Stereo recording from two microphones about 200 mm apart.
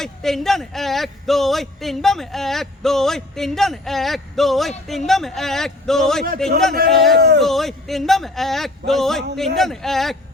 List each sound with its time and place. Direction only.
0.0 s a man's voice: centre (ahead or behind)
7.2 s speech: 55° right (ahead or behind)
7.4 s a man's voice: centre (ahead or behind)